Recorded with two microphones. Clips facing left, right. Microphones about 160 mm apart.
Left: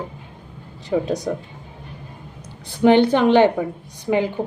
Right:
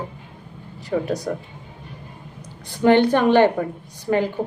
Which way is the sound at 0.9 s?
20° left (ahead or behind).